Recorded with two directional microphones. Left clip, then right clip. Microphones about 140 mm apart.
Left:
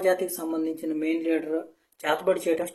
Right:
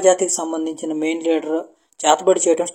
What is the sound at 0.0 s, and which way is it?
Speech, 40° right (ahead or behind).